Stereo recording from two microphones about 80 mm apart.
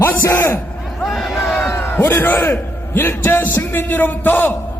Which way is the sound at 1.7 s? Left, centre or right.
Left.